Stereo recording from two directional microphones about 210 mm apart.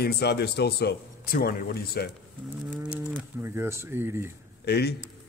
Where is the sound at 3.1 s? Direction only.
10° right (ahead or behind).